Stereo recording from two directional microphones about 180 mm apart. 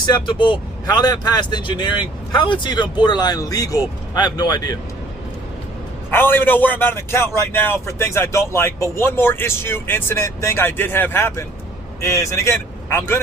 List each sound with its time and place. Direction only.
0.0 s speech: 25° left (ahead or behind)
6.1 s a man's voice: 10° left (ahead or behind)